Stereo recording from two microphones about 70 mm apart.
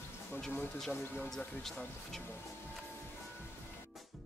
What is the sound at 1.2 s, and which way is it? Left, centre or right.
Speech, centre.